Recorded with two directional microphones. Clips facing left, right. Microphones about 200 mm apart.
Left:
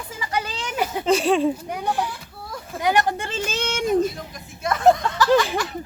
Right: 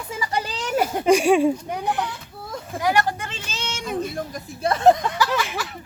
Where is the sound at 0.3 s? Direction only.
35° right (ahead or behind).